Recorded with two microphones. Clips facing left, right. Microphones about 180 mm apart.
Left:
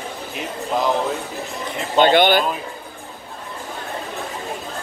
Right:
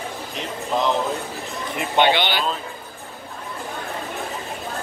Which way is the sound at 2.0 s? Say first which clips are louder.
Left 5 dB; 50° left (ahead or behind).